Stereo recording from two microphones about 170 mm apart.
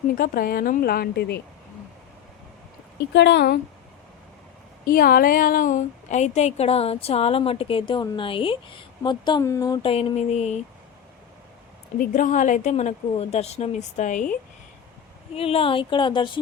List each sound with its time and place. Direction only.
0.2 s a woman's voice: 60° left (ahead or behind)
3.1 s speech: 90° left; by 3.6 s 75° left (ahead or behind)
4.9 s a woman's voice: 60° left (ahead or behind); by 9.8 s 20° left (ahead or behind)
9.8 s a woman's voice: 35° left (ahead or behind)
11.9 s a woman's voice: 50° left (ahead or behind)
15.4 s speech: 35° left (ahead or behind)